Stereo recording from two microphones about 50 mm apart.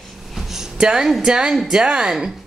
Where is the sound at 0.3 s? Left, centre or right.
Centre.